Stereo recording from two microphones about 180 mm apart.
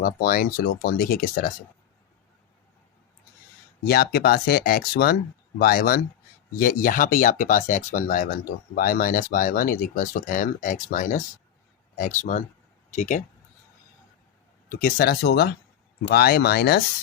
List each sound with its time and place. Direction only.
0.0 s speech: 55° left (ahead or behind)
3.8 s speech: 60° left (ahead or behind); by 13.2 s 40° left (ahead or behind)
14.7 s speech: 55° left (ahead or behind)